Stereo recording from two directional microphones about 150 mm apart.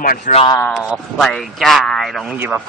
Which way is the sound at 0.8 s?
Centre (ahead or behind).